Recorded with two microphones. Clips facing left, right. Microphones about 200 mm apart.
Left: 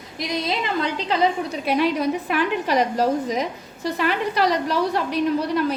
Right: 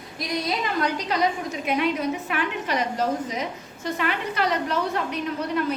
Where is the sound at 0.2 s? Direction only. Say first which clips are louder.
Left 2 dB; 25° left (ahead or behind).